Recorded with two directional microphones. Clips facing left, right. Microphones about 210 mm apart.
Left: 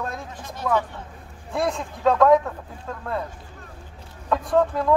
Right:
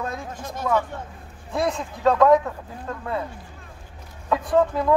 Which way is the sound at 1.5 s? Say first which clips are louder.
Even; centre (ahead or behind).